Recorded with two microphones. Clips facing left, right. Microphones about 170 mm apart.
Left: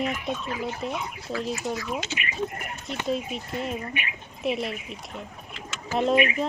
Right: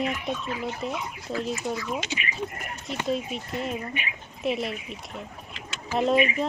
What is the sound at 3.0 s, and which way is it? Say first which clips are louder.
Speech: even; centre (ahead or behind).